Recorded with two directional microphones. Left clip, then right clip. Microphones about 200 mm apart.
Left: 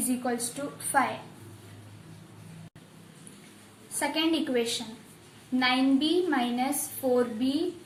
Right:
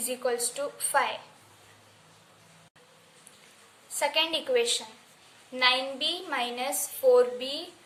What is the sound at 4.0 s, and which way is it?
A woman's voice, 55° right (ahead or behind).